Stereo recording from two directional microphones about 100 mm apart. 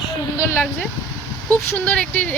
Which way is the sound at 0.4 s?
20° left (ahead or behind).